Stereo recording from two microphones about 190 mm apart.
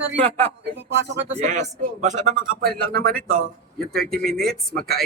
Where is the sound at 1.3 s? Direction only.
40° right (ahead or behind).